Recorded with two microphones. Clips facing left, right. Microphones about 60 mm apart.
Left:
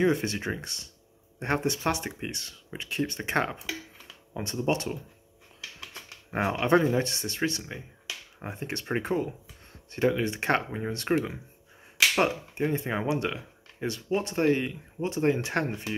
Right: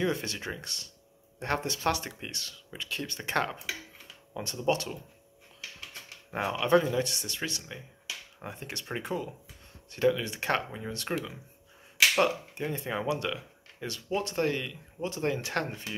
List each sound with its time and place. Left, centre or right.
0.0 s speech: left
6.3 s speech: left